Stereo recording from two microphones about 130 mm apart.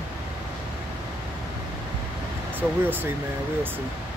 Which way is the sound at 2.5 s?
15° right (ahead or behind).